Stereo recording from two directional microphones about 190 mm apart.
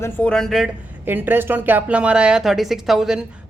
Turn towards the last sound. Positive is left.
turn(degrees=0)  # may be behind; listen again after turning